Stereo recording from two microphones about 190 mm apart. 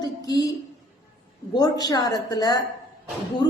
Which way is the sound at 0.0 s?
20° left (ahead or behind).